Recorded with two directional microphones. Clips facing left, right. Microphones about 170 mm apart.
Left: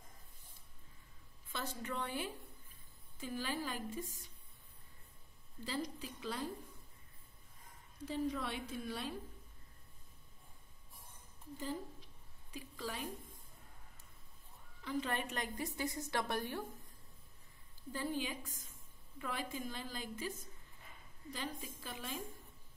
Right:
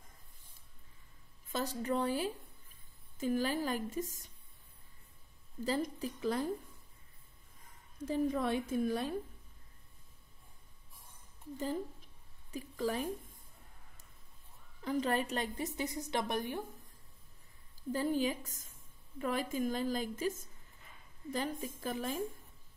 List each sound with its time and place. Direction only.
1.5 s a woman's voice: 40° right (ahead or behind)
5.6 s a woman's voice: 45° right (ahead or behind)
8.0 s a woman's voice: 45° right (ahead or behind)
12.4 s a woman's voice: 45° right (ahead or behind)
14.8 s a woman's voice: 40° right (ahead or behind); by 16.6 s 15° right (ahead or behind)
17.9 s a woman's voice: 40° right (ahead or behind)